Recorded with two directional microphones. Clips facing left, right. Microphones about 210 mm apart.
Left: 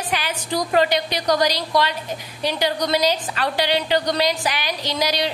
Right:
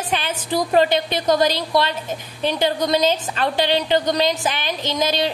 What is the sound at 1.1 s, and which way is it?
Speech, 25° right (ahead or behind).